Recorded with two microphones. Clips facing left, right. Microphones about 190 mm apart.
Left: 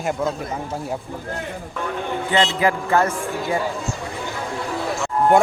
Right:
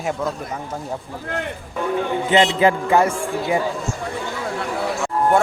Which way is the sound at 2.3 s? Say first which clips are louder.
Right 3 dB; 20° right (ahead or behind).